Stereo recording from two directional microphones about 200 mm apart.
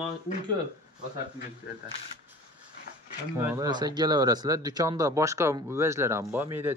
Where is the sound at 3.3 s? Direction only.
15° right (ahead or behind).